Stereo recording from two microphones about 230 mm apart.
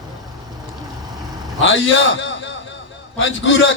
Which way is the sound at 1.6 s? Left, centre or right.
Left.